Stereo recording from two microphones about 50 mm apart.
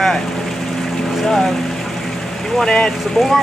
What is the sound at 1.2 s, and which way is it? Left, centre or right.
Speech, centre.